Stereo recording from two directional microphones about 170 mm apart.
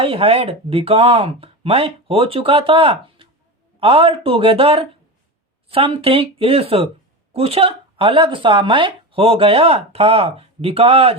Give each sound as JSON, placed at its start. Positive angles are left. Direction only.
{"t": 0.0, "sound": "speech", "side_deg": -35}